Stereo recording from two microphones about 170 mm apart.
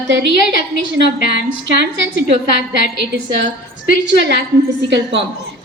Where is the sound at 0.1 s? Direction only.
90° right.